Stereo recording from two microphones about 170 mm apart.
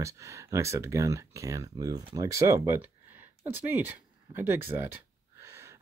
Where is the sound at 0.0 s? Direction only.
20° right (ahead or behind).